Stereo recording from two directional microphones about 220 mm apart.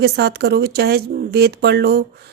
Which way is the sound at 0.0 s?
45° right (ahead or behind).